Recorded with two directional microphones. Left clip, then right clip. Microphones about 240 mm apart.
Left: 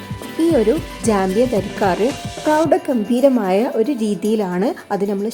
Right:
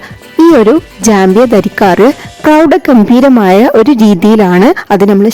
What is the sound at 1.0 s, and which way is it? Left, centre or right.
Speech, right.